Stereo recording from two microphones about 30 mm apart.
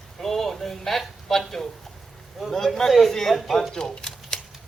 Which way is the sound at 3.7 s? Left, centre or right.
Left.